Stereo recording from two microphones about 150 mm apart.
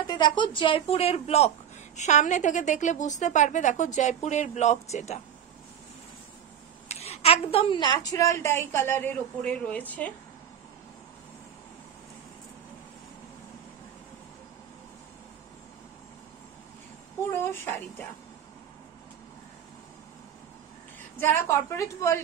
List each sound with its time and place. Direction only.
0.0 s a woman's voice: 30° left (ahead or behind); by 5.2 s 50° left (ahead or behind)
6.9 s a woman's voice: 45° left (ahead or behind); by 10.1 s 10° left (ahead or behind)
17.3 s a woman's voice: 15° left (ahead or behind)
21.2 s a woman's voice: 15° left (ahead or behind)